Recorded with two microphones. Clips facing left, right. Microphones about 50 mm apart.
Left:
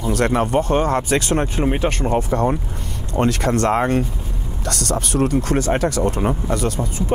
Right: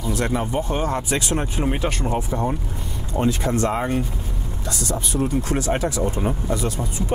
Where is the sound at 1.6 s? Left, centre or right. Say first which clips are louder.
Left 2 dB; centre.